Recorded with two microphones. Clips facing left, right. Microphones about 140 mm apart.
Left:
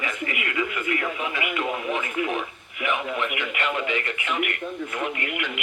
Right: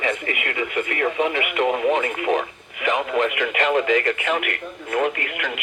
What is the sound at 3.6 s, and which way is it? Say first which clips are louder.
Speech: right 8 dB; 40° right (ahead or behind).